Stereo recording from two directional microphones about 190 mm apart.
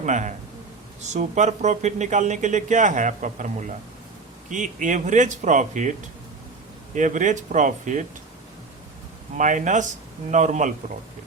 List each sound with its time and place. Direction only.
0.0 s speech: 40° right (ahead or behind)
6.9 s speech: 40° right (ahead or behind)
9.4 s speech: 40° right (ahead or behind)